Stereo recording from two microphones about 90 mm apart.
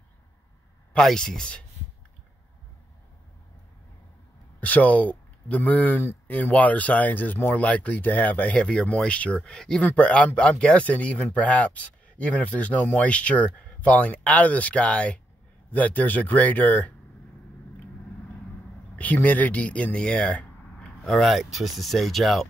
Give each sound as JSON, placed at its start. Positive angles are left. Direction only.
{"t": 0.9, "sound": "speech", "side_deg": 5}
{"t": 4.6, "sound": "speech", "side_deg": 20}
{"t": 18.9, "sound": "speech", "side_deg": 15}